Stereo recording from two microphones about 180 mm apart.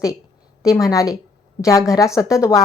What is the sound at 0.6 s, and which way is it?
A woman's voice, 20° left (ahead or behind).